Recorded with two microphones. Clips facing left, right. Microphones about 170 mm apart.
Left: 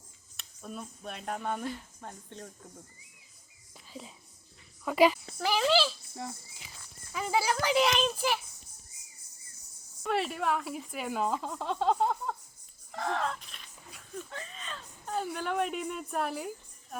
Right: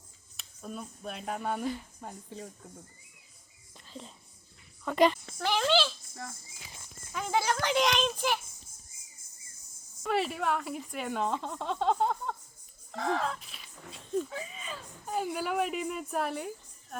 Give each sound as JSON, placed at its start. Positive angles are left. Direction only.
{"t": 0.3, "sound": "a woman's voice", "side_deg": 0}
{"t": 3.8, "sound": "whispering", "side_deg": 5}
{"t": 4.9, "sound": "speech", "side_deg": 5}
{"t": 6.1, "sound": "cricket", "side_deg": 20}
{"t": 7.1, "sound": "a woman's voice", "side_deg": 5}
{"t": 10.0, "sound": "a woman's voice", "side_deg": 0}
{"t": 13.9, "sound": "pig", "side_deg": -25}
{"t": 14.3, "sound": "a woman's voice", "side_deg": -5}
{"t": 16.9, "sound": "music", "side_deg": 0}